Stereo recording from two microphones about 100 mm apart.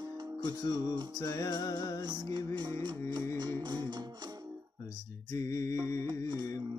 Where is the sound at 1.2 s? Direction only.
40° left (ahead or behind).